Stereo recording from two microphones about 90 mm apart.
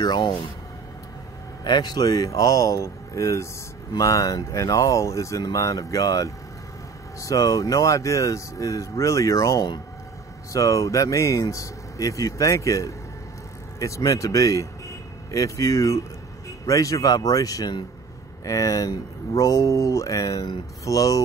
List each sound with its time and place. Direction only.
0.0 s speech: 50° left (ahead or behind)
1.6 s speech: 50° left (ahead or behind)